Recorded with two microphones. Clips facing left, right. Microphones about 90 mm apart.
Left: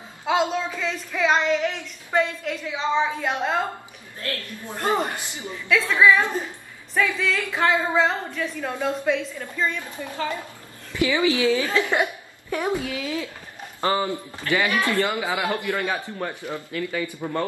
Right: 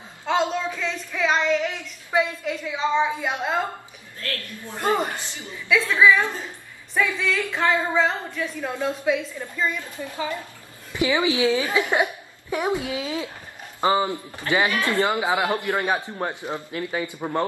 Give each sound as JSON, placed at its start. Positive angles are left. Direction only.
{"t": 0.2, "sound": "child singing", "side_deg": 5}
{"t": 4.2, "sound": "a woman's voice", "side_deg": 20}
{"t": 5.7, "sound": "child singing", "side_deg": -5}
{"t": 6.9, "sound": "child singing", "side_deg": 0}
{"t": 10.9, "sound": "a man's voice", "side_deg": -20}